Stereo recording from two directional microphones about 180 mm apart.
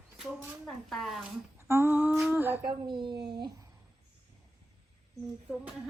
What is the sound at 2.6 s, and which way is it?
Speech, 25° right (ahead or behind).